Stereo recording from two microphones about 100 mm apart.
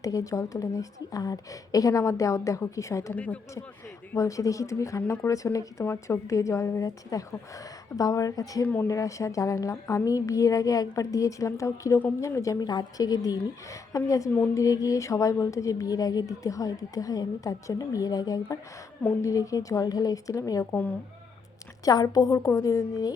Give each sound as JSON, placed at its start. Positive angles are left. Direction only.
{"t": 0.0, "sound": "a woman's voice", "side_deg": 35}
{"t": 3.2, "sound": "speech", "side_deg": 15}
{"t": 4.1, "sound": "a woman's voice", "side_deg": 30}
{"t": 8.6, "sound": "speech", "side_deg": 20}
{"t": 8.9, "sound": "a woman's voice", "side_deg": 35}
{"t": 21.8, "sound": "a woman's voice", "side_deg": 40}